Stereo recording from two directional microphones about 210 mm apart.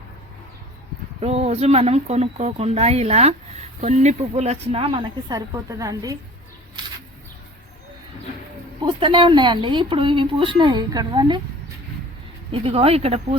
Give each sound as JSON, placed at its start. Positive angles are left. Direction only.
{"t": 1.2, "sound": "speech", "side_deg": -30}
{"t": 8.8, "sound": "speech", "side_deg": -25}
{"t": 12.5, "sound": "speech", "side_deg": -25}